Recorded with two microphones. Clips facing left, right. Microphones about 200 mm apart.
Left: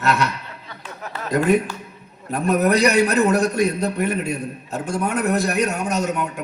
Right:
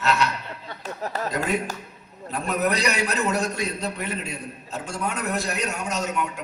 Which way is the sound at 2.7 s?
55° left (ahead or behind).